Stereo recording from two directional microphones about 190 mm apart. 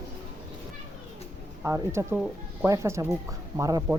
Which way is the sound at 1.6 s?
15° right (ahead or behind).